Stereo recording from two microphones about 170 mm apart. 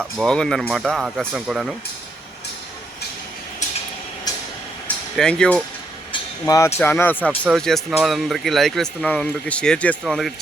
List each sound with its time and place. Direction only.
0.2 s speech: 5° left (ahead or behind)
4.3 s a sound: 20° left (ahead or behind)
5.1 s speech: 5° left (ahead or behind)
6.4 s speech: 15° left (ahead or behind); by 10.3 s centre (ahead or behind)